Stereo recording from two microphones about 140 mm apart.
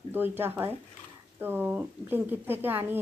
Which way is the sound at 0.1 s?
15° right (ahead or behind).